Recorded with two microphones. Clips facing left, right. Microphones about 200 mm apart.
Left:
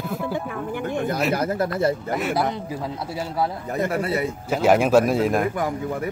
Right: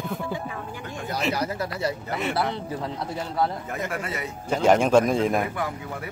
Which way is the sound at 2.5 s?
10° left (ahead or behind).